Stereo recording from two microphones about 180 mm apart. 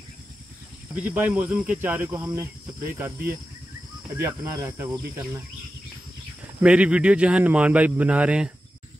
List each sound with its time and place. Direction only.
0.9 s speech: 10° right (ahead or behind)
6.6 s speech: 5° right (ahead or behind)